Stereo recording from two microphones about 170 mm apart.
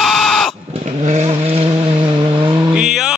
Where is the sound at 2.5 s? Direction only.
5° right (ahead or behind).